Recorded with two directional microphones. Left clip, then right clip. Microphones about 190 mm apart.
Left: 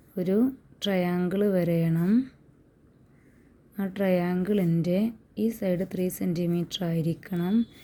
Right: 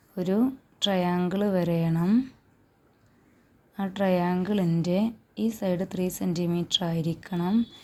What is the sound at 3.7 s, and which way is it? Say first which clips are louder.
A woman's voice: right 1 dB; 35° left (ahead or behind).